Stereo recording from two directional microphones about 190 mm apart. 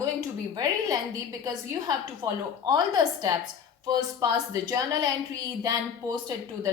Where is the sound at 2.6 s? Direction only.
20° right (ahead or behind).